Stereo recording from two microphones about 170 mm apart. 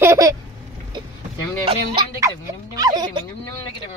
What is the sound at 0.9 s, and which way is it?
Vehicle, 25° right (ahead or behind).